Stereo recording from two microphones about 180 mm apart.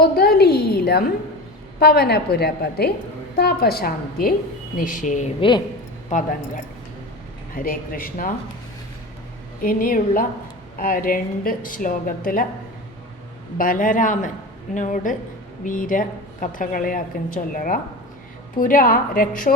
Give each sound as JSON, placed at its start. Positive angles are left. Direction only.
{"t": 0.0, "sound": "a sound", "side_deg": 60}
{"t": 1.8, "sound": "a woman's voice", "side_deg": 60}
{"t": 5.4, "sound": "speech", "side_deg": 25}
{"t": 6.1, "sound": "a woman's voice", "side_deg": 45}
{"t": 7.5, "sound": "a woman's voice", "side_deg": 50}
{"t": 9.6, "sound": "a woman's voice", "side_deg": 55}
{"t": 13.6, "sound": "a woman's voice", "side_deg": 50}